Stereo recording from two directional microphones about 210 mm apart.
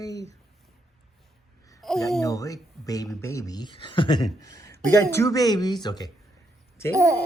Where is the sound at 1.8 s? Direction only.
Centre (ahead or behind).